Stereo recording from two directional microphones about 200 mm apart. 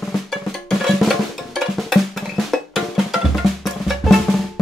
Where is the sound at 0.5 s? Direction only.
Centre (ahead or behind).